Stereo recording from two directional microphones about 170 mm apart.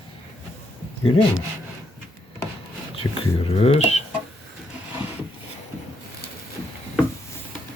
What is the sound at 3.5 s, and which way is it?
Speech, 40° left (ahead or behind).